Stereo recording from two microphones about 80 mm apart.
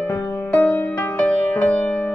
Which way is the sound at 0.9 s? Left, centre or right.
Left.